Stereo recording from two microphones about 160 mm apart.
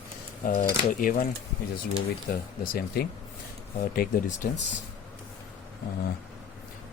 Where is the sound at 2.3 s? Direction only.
70° left (ahead or behind).